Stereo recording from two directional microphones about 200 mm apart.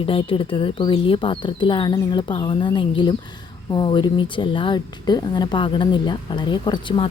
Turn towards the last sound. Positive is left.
turn(degrees=25)  # may be behind; listen again after turning